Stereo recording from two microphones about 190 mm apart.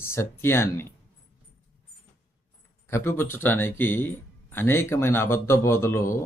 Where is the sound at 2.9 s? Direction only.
15° left (ahead or behind).